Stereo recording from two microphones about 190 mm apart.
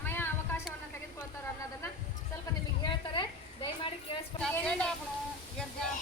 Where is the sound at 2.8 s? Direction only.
25° left (ahead or behind).